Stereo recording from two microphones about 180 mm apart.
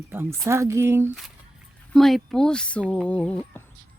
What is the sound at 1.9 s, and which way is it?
Speech, centre (ahead or behind).